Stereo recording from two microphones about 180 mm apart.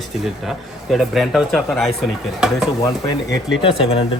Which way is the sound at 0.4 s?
Centre (ahead or behind).